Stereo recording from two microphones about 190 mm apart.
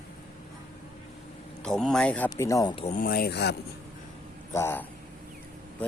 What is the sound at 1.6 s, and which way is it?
Speech, 5° left (ahead or behind).